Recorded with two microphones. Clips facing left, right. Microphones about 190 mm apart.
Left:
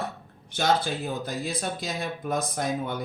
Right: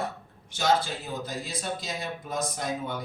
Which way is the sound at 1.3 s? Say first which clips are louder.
Left 3 dB; 55° left (ahead or behind).